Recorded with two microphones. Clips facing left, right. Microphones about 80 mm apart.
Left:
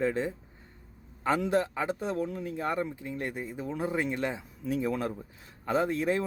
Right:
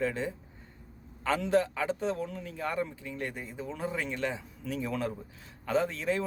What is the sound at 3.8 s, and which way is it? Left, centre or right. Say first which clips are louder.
Speech: left 3 dB; left.